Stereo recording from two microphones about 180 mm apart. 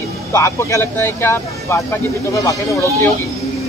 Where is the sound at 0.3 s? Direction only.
15° left (ahead or behind).